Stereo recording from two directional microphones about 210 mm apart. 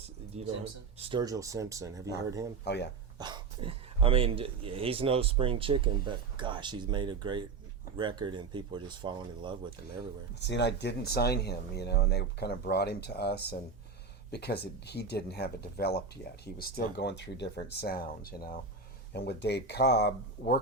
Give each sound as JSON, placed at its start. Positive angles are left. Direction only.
{"t": 0.3, "sound": "speech", "side_deg": -30}
{"t": 2.6, "sound": "speech", "side_deg": 55}
{"t": 3.2, "sound": "speech", "side_deg": -20}
{"t": 10.4, "sound": "speech", "side_deg": 55}